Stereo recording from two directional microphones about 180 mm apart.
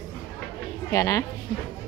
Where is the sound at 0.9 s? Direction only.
15° left (ahead or behind).